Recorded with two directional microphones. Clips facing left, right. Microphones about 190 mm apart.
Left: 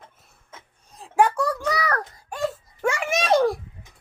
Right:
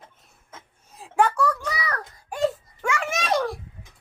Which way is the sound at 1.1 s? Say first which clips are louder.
Left 1 dB; 10° left (ahead or behind).